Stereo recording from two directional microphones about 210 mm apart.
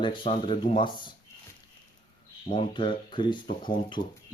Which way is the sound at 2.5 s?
25° left (ahead or behind).